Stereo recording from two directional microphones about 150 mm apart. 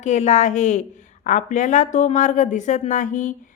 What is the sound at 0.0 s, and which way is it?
A woman's voice, 50° left (ahead or behind).